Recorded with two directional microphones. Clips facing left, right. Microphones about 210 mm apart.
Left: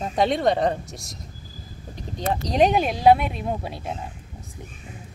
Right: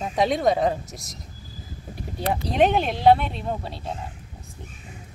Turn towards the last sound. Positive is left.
turn(degrees=15)  # may be behind; listen again after turning